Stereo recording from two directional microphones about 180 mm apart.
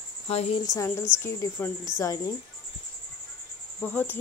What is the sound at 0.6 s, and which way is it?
Speech, 15° left (ahead or behind).